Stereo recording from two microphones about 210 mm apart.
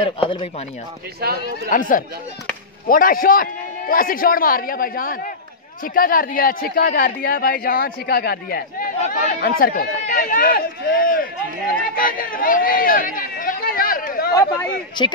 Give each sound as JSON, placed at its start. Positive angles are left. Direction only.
{"t": 0.2, "sound": "speech", "side_deg": 25}
{"t": 1.2, "sound": "a man's voice", "side_deg": -45}
{"t": 1.7, "sound": "speech", "side_deg": 40}
{"t": 11.9, "sound": "chatter", "side_deg": 40}
{"t": 15.0, "sound": "speech", "side_deg": 20}